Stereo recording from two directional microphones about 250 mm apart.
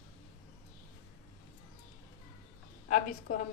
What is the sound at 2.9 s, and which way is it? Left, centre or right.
Speech, left.